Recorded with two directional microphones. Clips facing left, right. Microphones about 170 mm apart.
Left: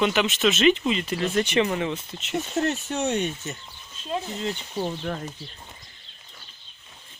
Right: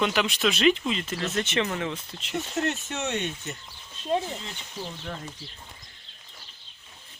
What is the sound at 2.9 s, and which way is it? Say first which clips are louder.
Speech: left 5 dB; 35° left (ahead or behind).